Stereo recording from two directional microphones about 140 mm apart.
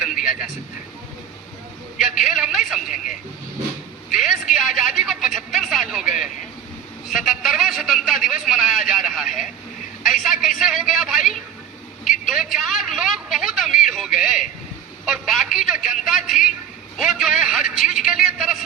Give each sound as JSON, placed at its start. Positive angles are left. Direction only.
{"t": 0.2, "sound": "speech", "side_deg": -5}
{"t": 2.0, "sound": "speech", "side_deg": 0}
{"t": 4.1, "sound": "a sound", "side_deg": 0}
{"t": 10.0, "sound": "vehicle", "side_deg": 0}
{"t": 10.6, "sound": "a man's voice", "side_deg": 0}